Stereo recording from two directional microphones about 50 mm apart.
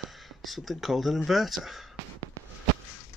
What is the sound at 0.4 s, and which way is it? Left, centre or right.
Speech, centre.